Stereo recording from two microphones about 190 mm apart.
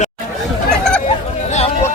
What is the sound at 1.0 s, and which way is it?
Chatter, 35° left (ahead or behind).